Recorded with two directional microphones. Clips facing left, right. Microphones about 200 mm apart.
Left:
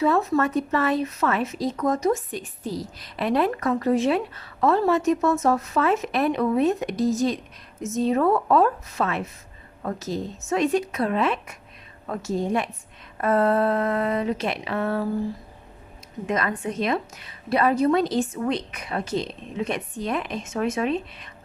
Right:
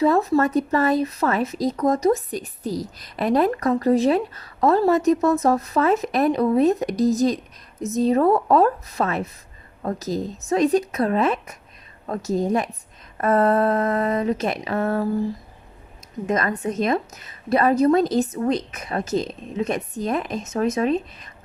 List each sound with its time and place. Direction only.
0.0 s a woman's voice: 35° right (ahead or behind)
16.2 s a woman's voice: 40° right (ahead or behind)